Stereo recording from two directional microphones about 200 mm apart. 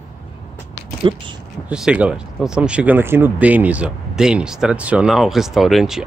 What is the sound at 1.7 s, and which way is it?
Speech, 5° right (ahead or behind).